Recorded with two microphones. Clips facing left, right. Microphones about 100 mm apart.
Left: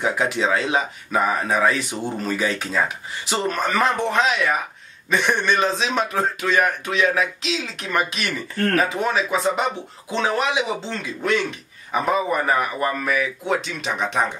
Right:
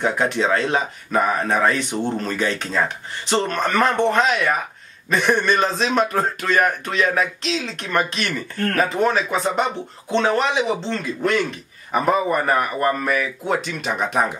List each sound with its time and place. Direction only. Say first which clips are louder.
0.0 s speech: right 1 dB; centre (ahead or behind)